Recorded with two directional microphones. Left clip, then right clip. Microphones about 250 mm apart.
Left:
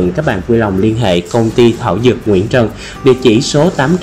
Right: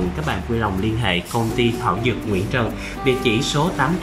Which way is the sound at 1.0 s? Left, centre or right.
Left.